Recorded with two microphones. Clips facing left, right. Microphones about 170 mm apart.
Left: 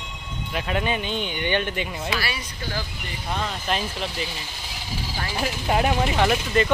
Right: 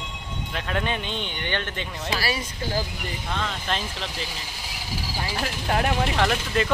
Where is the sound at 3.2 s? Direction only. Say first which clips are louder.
Left 3 dB; 10° left (ahead or behind).